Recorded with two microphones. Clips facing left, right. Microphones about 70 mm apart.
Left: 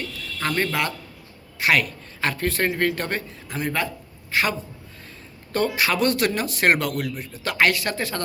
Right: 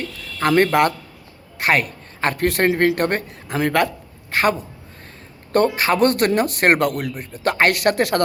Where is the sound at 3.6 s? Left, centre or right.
Right.